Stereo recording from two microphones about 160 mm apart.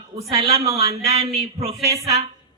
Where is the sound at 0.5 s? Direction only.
20° right (ahead or behind).